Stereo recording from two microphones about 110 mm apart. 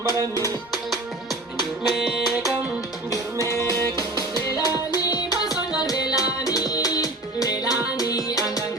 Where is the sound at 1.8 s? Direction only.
Centre (ahead or behind).